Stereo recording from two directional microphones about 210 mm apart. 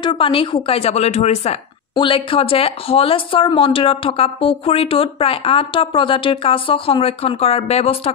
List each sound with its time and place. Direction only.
0.0 s speech: 25° left (ahead or behind)